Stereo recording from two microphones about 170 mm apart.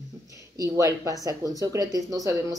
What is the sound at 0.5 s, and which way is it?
Speech, 20° right (ahead or behind).